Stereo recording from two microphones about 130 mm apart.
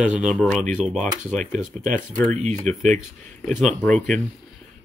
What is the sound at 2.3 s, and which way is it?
Speech, 70° right (ahead or behind).